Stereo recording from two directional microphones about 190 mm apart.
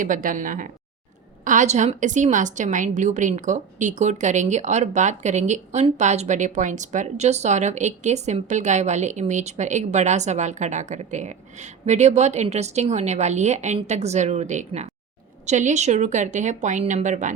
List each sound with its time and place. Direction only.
0.0 s a woman's voice: 45° right (ahead or behind)